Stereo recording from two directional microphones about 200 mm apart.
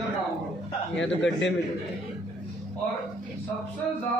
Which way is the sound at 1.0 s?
65° left (ahead or behind).